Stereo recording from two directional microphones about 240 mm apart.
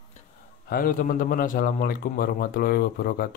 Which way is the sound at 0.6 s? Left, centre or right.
Left.